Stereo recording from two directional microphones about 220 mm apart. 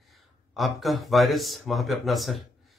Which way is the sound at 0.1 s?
Centre (ahead or behind).